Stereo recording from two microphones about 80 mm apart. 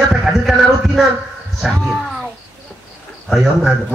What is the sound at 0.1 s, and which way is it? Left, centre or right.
Heart murmur, centre.